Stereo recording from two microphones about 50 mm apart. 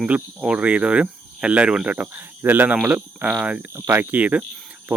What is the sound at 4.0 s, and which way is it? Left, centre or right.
Speech, right.